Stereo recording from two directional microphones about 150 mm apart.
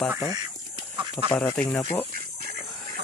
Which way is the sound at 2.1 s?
90° right.